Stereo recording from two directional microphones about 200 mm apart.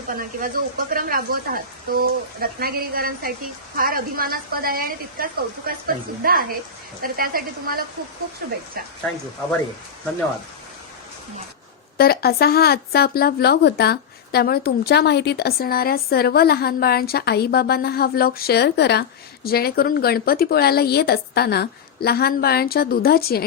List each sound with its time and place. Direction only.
0.1 s speech: 45° right (ahead or behind)
11.9 s speech: 50° left (ahead or behind)